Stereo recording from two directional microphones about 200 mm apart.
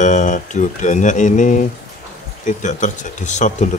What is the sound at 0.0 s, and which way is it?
Speech, 40° left (ahead or behind).